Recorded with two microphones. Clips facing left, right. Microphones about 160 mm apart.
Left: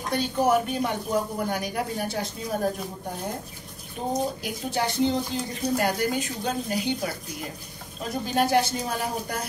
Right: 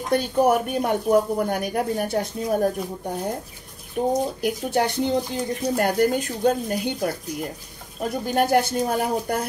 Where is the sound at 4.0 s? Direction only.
60° right (ahead or behind).